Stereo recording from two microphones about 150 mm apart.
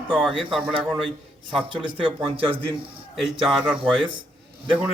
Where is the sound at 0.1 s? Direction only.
Centre (ahead or behind).